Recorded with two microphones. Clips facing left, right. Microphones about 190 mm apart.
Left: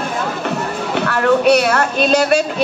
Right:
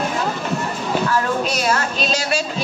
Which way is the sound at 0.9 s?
70° left (ahead or behind).